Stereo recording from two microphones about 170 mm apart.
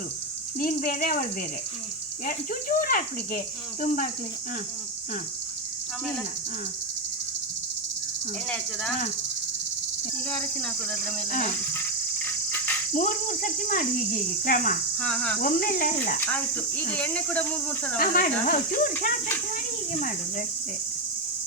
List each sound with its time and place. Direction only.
0.6 s speech: 55° left (ahead or behind)
8.4 s speech: 5° left (ahead or behind)
12.2 s cricket: 10° left (ahead or behind)
12.9 s speech: 50° left (ahead or behind)
14.9 s speech: 5° left (ahead or behind)
15.4 s speech: 55° left (ahead or behind)
16.2 s speech: 10° left (ahead or behind)
17.9 s speech: 55° left (ahead or behind)